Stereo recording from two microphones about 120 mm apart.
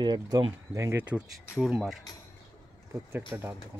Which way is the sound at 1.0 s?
10° right (ahead or behind).